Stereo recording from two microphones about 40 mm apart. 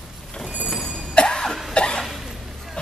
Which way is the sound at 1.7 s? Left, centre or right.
Left.